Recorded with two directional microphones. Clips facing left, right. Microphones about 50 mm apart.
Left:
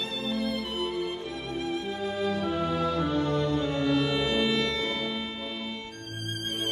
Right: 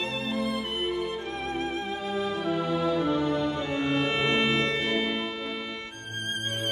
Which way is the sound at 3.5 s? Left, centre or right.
Right.